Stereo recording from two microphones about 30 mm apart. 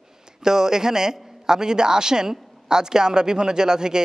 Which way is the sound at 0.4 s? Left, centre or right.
Centre.